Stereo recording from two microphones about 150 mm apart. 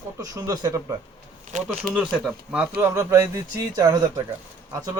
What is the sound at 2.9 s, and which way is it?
A man's voice, 20° right (ahead or behind).